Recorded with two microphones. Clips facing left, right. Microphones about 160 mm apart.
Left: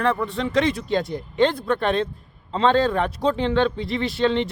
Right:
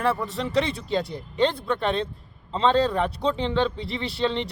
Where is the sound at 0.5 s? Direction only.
30° right (ahead or behind).